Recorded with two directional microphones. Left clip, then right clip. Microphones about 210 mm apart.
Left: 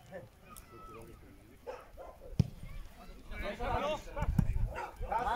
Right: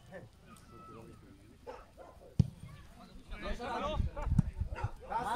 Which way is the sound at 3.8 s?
10° right (ahead or behind).